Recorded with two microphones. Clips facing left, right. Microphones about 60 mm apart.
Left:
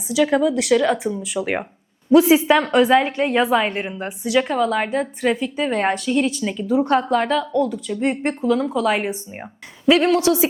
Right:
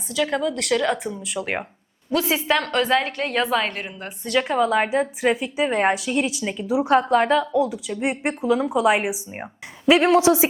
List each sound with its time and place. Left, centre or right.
0.1 s a woman's voice: centre
2.1 s a woman's voice: centre
4.2 s a woman's voice: centre; by 10.5 s right